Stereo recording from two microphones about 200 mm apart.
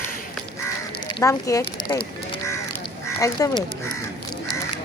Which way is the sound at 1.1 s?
15° left (ahead or behind).